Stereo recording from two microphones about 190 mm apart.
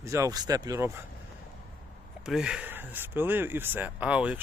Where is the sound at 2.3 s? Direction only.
5° right (ahead or behind).